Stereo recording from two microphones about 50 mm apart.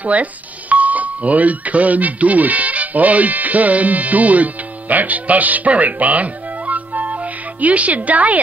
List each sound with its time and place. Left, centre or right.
0.0 s speech: right